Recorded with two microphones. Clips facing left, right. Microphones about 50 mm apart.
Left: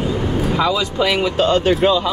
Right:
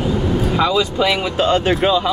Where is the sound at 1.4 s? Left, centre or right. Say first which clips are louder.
Left 1 dB; centre.